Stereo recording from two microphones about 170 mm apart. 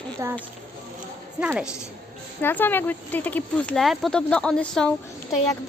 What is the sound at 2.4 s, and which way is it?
Speech, 10° left (ahead or behind).